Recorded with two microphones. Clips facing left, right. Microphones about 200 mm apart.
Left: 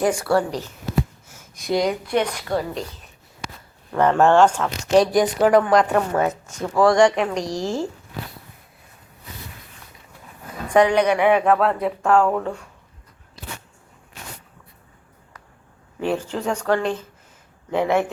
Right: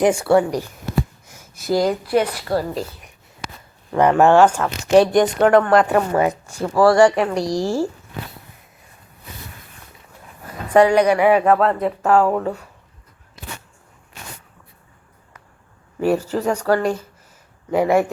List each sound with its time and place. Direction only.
0.0 s speech: 25° right (ahead or behind)
1.3 s speech: 5° right (ahead or behind)
10.7 s speech: 10° right (ahead or behind)
16.0 s speech: 10° right (ahead or behind)